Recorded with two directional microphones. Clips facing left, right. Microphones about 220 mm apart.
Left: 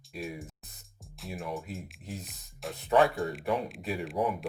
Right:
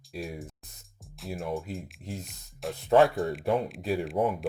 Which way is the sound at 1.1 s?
Centre (ahead or behind).